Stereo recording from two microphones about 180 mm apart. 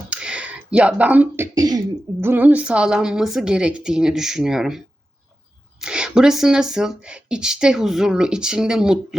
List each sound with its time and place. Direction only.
0.1 s a sound: 5° right (ahead or behind)
1.5 s speech: 20° right (ahead or behind)
2.2 s speech: 10° right (ahead or behind)
5.8 s speech: 5° right (ahead or behind)